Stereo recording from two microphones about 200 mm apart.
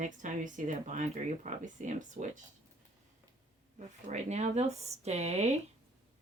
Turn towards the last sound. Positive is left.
turn(degrees=-30)  # may be behind; listen again after turning